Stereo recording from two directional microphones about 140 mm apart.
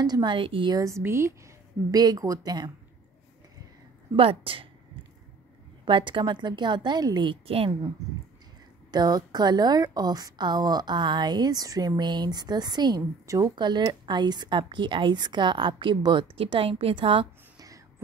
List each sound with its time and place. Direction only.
0.0 s a woman's voice: 30° right (ahead or behind)
0.7 s a woman's voice: 20° right (ahead or behind)
4.2 s a woman's voice: 40° right (ahead or behind)
5.9 s a woman's voice: 35° right (ahead or behind)
8.9 s a woman's voice: 30° right (ahead or behind)